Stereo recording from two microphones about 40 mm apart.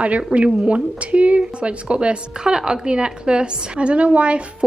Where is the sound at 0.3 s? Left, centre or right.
Right.